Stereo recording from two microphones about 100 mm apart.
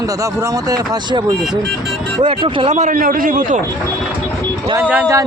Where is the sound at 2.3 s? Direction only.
60° right (ahead or behind).